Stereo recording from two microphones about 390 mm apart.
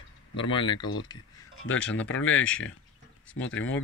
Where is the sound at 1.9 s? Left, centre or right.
Centre.